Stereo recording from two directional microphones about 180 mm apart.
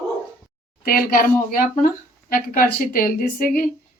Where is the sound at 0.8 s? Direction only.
55° left (ahead or behind).